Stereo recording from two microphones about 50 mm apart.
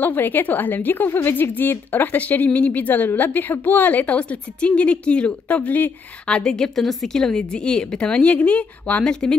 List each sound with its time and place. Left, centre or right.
0.0 s a woman's voice: left
2.1 s a woman's voice: left
6.2 s a woman's voice: centre; by 9.0 s left